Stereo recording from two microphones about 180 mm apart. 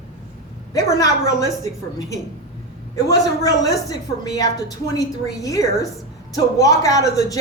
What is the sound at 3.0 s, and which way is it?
Speech, 20° left (ahead or behind).